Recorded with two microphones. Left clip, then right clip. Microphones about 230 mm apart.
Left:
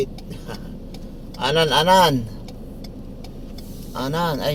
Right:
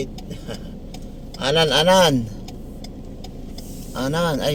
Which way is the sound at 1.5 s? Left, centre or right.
Centre.